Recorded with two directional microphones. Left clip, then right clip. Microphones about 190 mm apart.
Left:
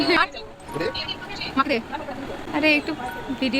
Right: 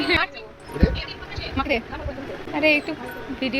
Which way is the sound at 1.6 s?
10° left (ahead or behind).